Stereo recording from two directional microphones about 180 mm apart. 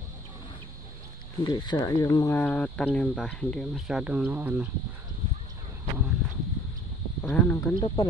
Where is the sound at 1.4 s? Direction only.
25° left (ahead or behind); by 4.7 s 10° right (ahead or behind).